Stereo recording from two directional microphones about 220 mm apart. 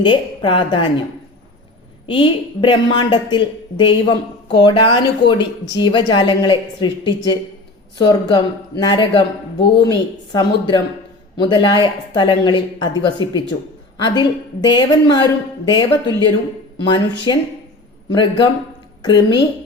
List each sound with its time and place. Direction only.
0.0 s a woman's voice: 20° left (ahead or behind)
2.1 s a woman's voice: 20° left (ahead or behind)